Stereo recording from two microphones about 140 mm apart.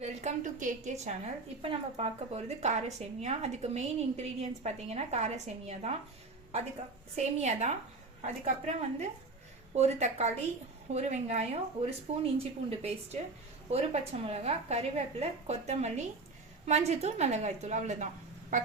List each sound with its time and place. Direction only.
0.0 s a woman's voice: 50° right (ahead or behind)
1.6 s a woman's voice: 40° right (ahead or behind)
7.2 s a woman's voice: 55° right (ahead or behind)